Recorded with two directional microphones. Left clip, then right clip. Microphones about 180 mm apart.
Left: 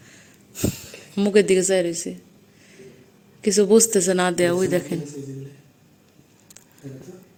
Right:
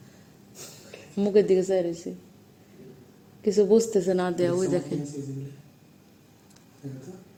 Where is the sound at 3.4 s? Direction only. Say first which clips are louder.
Left 4 dB; 10° left (ahead or behind).